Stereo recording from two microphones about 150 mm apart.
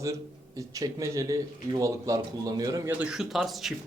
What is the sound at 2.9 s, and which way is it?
Speech, 5° right (ahead or behind).